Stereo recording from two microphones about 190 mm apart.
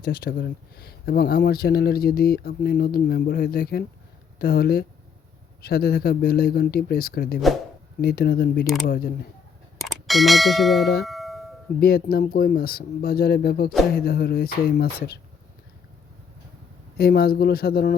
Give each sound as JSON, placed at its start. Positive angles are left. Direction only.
{"t": 0.0, "sound": "speech", "side_deg": 50}
{"t": 9.8, "sound": "speech", "side_deg": 0}
{"t": 11.0, "sound": "doorbell", "side_deg": 0}
{"t": 11.8, "sound": "speech", "side_deg": 55}
{"t": 17.0, "sound": "speech", "side_deg": 55}